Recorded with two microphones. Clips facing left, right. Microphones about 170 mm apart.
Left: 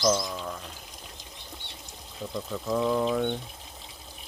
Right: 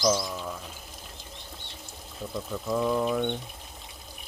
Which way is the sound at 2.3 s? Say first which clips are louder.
Even; centre (ahead or behind).